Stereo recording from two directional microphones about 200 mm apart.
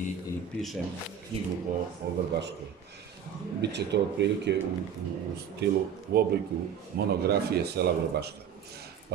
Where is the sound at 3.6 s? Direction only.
60° right (ahead or behind).